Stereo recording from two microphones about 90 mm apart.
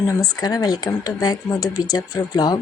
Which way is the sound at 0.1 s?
45° left (ahead or behind).